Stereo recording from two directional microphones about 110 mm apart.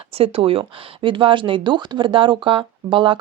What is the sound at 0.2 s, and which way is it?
Speech, 60° right (ahead or behind).